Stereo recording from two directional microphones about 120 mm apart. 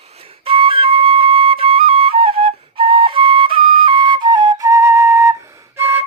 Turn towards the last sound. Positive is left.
turn(degrees=-20)  # may be behind; listen again after turning